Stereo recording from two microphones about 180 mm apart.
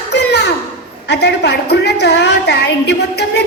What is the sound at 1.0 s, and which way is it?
A woman's voice, 70° left (ahead or behind).